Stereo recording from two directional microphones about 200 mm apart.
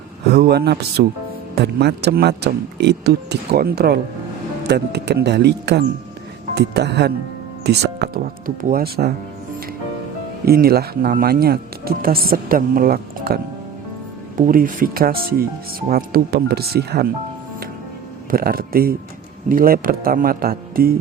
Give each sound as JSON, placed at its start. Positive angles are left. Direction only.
{"t": 0.3, "sound": "speech", "side_deg": -55}
{"t": 10.4, "sound": "speech", "side_deg": -50}
{"t": 18.3, "sound": "speech", "side_deg": -50}